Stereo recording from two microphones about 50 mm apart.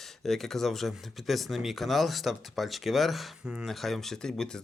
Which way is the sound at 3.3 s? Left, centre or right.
Centre.